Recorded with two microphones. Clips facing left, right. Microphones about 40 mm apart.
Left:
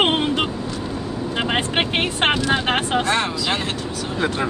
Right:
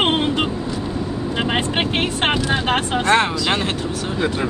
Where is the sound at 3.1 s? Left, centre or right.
Centre.